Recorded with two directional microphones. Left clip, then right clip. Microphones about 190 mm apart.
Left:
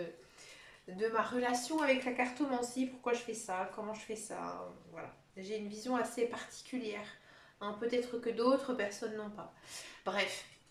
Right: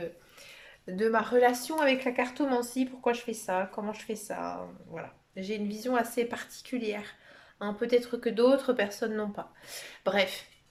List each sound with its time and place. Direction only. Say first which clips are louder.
0.9 s speech: right 9 dB; 50° right (ahead or behind)